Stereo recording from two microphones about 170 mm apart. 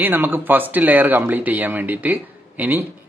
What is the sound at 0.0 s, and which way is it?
Speech, 10° right (ahead or behind).